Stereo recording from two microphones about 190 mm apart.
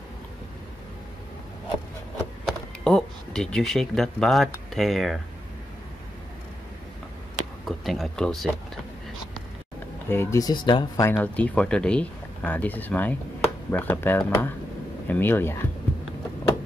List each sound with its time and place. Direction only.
2.4 s a sound: centre (ahead or behind)
4.7 s speech: centre (ahead or behind)
7.6 s speech: centre (ahead or behind)
10.0 s speech: 15° left (ahead or behind)
11.1 s speech: 5° left (ahead or behind)